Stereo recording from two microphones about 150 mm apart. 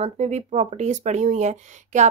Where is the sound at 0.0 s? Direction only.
50° right (ahead or behind).